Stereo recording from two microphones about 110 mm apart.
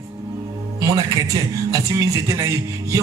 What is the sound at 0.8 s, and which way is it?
A man's voice, 30° right (ahead or behind).